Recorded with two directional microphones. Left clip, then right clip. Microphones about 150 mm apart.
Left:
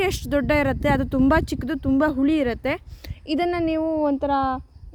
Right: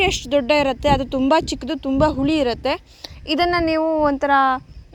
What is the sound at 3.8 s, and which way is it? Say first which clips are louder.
Speech: right 5 dB; 5° left (ahead or behind).